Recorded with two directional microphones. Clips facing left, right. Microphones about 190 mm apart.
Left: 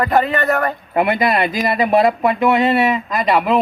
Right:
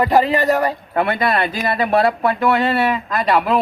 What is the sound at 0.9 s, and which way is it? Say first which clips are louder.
Speech: left 4 dB; 10° left (ahead or behind).